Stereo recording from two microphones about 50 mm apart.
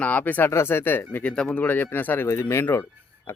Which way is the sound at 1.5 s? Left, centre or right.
Left.